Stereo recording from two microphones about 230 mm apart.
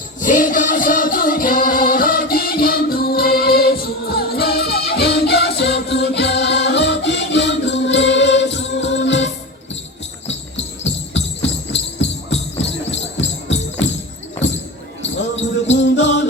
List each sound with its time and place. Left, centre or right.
0.2 s music: left
11.7 s music: left
15.0 s basketball bounce: left
15.7 s music: left